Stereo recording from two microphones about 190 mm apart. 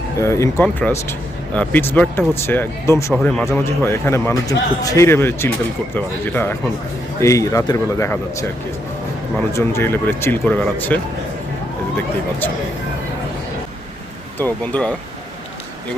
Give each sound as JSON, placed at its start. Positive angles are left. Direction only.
{"t": 0.2, "sound": "speech", "side_deg": 15}
{"t": 9.5, "sound": "speech", "side_deg": 15}
{"t": 14.3, "sound": "speech", "side_deg": 10}